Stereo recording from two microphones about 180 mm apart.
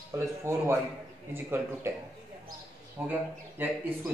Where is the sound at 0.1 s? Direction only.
15° right (ahead or behind).